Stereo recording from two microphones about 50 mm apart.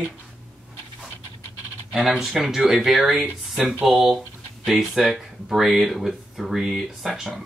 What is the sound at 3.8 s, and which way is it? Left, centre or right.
Speech, centre.